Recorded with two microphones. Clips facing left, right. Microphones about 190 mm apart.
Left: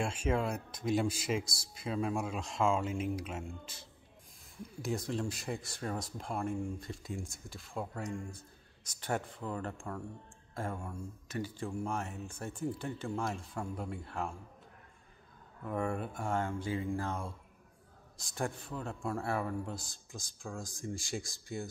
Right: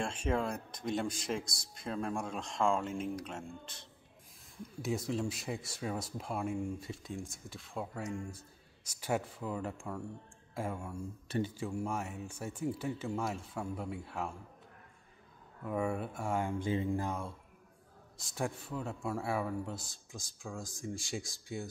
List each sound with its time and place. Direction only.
0.0 s speech: centre (ahead or behind)
4.8 s speech: centre (ahead or behind)
11.2 s speech: 30° right (ahead or behind)
11.5 s speech: 5° right (ahead or behind)
15.6 s speech: 5° right (ahead or behind); by 17.1 s 20° right (ahead or behind)
18.2 s speech: 5° right (ahead or behind)